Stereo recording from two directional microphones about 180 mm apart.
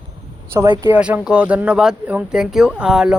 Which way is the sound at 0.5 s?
20° right (ahead or behind).